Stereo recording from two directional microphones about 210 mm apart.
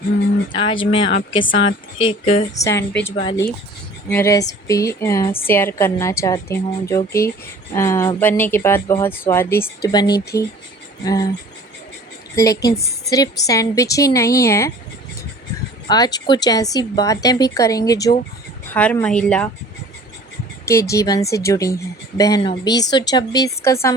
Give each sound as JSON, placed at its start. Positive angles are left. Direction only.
{"t": 0.5, "sound": "a woman's voice", "side_deg": 25}
{"t": 2.6, "sound": "speech", "side_deg": 10}
{"t": 12.4, "sound": "a woman's voice", "side_deg": 15}
{"t": 15.9, "sound": "speech", "side_deg": 20}
{"t": 20.7, "sound": "a woman's voice", "side_deg": 15}